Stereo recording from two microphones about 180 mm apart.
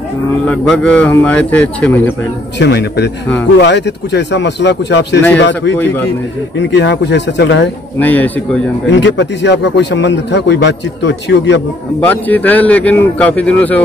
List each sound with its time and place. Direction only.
0.5 s a man's voice: 5° left (ahead or behind)
2.6 s a man's voice: 70° left (ahead or behind)
6.6 s a man's voice: 80° left
8.0 s a man's voice: 10° left (ahead or behind)
8.9 s a man's voice: 75° left (ahead or behind)
12.0 s a man's voice: 10° left (ahead or behind)